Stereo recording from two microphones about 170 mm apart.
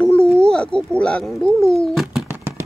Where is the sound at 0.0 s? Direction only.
5° left (ahead or behind).